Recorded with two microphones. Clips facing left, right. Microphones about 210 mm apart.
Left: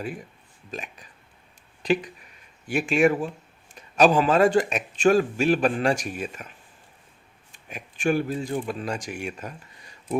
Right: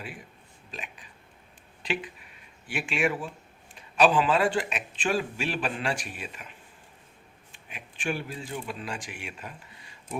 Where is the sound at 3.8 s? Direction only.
40° left (ahead or behind).